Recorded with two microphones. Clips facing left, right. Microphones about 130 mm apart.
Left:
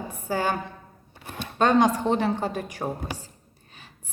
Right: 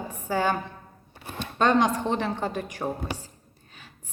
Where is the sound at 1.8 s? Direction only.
15° left (ahead or behind).